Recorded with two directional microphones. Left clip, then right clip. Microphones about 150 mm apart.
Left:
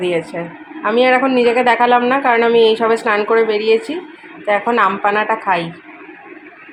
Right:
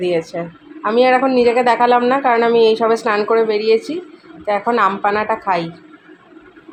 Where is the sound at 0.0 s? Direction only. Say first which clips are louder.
Even; centre (ahead or behind).